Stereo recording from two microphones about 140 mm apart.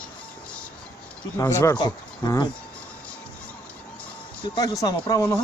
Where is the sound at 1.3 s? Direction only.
20° left (ahead or behind).